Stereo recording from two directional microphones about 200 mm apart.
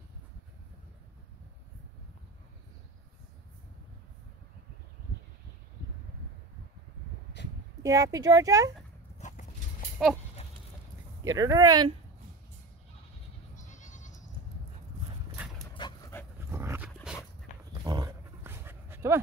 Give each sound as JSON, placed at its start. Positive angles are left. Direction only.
{"t": 7.8, "sound": "speech", "side_deg": -15}
{"t": 9.2, "sound": "horse", "side_deg": 35}
{"t": 10.0, "sound": "goat", "side_deg": -5}
{"t": 11.3, "sound": "speech", "side_deg": -20}
{"t": 13.6, "sound": "goat", "side_deg": 40}
{"t": 15.4, "sound": "dog", "side_deg": -5}
{"t": 15.8, "sound": "dog", "side_deg": 20}
{"t": 16.3, "sound": "dog", "side_deg": -15}
{"t": 17.8, "sound": "dog", "side_deg": -20}